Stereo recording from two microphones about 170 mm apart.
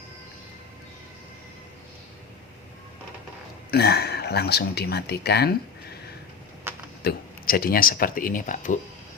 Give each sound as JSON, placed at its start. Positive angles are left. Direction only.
{"t": 3.7, "sound": "speech", "side_deg": 70}
{"t": 6.7, "sound": "a sound", "side_deg": -15}
{"t": 7.0, "sound": "speech", "side_deg": 60}